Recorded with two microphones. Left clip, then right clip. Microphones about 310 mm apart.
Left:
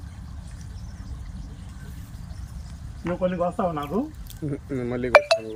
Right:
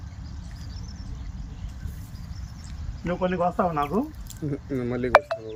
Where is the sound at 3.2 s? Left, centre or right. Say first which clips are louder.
Right 1 dB; centre.